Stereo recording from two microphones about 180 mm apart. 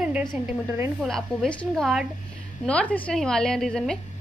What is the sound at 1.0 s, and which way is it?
A woman's voice, centre (ahead or behind).